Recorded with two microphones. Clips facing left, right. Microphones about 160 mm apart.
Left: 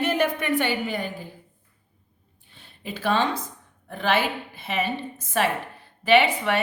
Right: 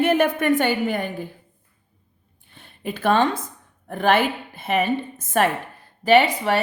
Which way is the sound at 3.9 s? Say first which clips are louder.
Right 5 dB; 50° right (ahead or behind).